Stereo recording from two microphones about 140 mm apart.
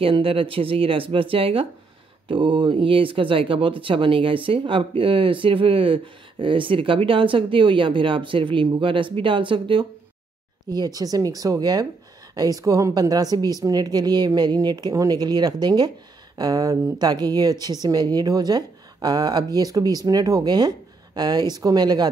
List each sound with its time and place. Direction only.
0.0 s speech: 40° right (ahead or behind)